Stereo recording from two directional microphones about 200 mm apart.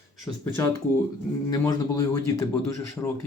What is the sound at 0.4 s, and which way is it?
A man's voice, 10° left (ahead or behind).